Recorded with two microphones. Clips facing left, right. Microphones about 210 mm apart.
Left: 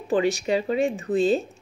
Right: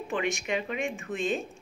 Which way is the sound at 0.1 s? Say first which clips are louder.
Left 8 dB; 35° left (ahead or behind).